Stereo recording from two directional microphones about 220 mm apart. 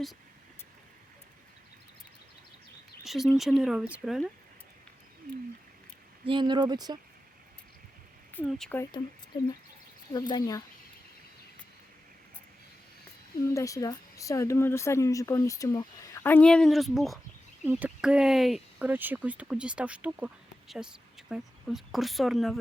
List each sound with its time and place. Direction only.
3.0 s speech: centre (ahead or behind)
6.2 s speech: 20° right (ahead or behind)
8.4 s speech: centre (ahead or behind)
10.1 s speech: 20° left (ahead or behind)
13.4 s speech: 15° left (ahead or behind)